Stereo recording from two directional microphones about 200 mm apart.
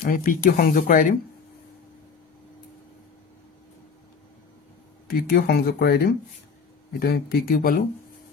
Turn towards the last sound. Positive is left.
turn(degrees=50)  # may be behind; listen again after turning